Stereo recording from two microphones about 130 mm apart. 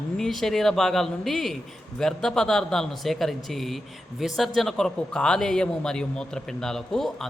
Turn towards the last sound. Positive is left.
turn(degrees=5)  # may be behind; listen again after turning